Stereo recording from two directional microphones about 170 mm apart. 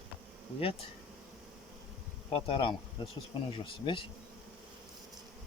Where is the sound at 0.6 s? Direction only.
35° left (ahead or behind).